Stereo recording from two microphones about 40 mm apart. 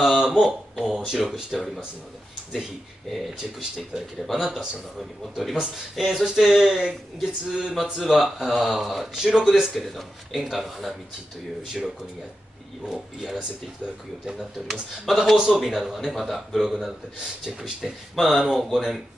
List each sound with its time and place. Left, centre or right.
0.1 s a sound: centre
0.5 s a man's voice: centre
1.5 s speech: centre
3.1 s speech: centre
3.9 s a man's voice: centre
6.5 s a man's voice: centre
9.8 s speech: centre
12.8 s a man's voice: centre
14.7 s a man's voice: centre
18.1 s speech: centre